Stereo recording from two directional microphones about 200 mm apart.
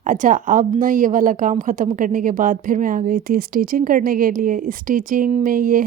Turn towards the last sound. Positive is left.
turn(degrees=-45)  # may be behind; listen again after turning